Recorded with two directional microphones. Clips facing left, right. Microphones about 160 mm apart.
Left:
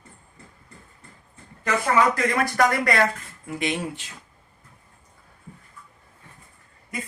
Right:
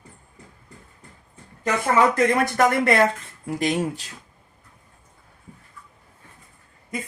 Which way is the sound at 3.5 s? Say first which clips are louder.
Right 4 dB; 40° right (ahead or behind).